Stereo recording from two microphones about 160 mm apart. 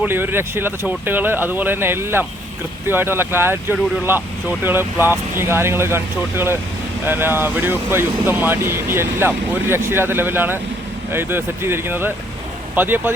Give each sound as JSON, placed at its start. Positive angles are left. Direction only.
{"t": 0.0, "sound": "speech", "side_deg": -15}